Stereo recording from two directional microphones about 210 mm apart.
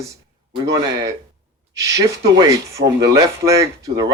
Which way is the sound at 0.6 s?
15° right (ahead or behind).